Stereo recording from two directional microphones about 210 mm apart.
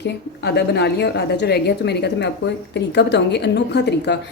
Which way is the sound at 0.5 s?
50° left (ahead or behind).